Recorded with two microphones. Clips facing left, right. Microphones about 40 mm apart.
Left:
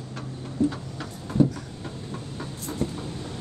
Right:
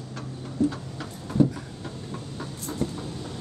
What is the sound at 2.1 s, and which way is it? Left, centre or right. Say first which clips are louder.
Train: even; centre.